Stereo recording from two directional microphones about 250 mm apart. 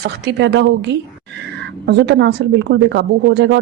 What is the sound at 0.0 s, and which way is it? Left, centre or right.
Speech, right.